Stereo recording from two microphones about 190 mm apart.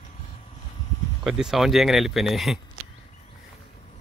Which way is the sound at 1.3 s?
Centre (ahead or behind).